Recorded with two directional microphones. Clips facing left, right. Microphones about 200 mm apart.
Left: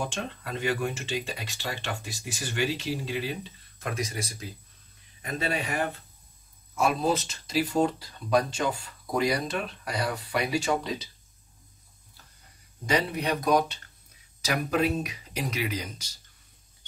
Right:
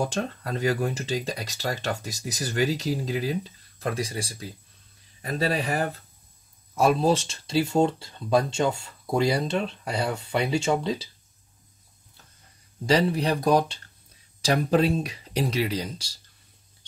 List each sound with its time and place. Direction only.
0.0 s speech: 40° right (ahead or behind)
12.8 s speech: 35° right (ahead or behind)